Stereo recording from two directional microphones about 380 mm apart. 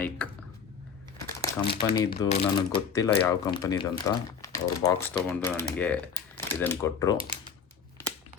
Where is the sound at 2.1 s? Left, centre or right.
Left.